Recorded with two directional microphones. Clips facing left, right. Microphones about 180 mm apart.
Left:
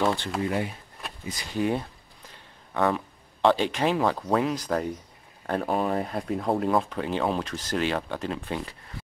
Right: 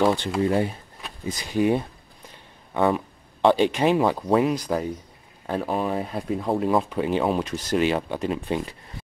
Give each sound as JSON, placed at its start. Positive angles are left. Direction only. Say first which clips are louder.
{"t": 0.0, "sound": "speech", "louder": "right 4 dB", "side_deg": -15}
{"t": 0.4, "sound": "speech", "louder": "right 6 dB", "side_deg": -35}
{"t": 1.5, "sound": "speech", "louder": "right 5 dB", "side_deg": -15}
{"t": 6.8, "sound": "speech", "louder": "right 4 dB", "side_deg": -15}